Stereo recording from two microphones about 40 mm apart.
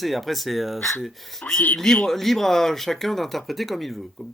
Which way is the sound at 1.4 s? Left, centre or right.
Left.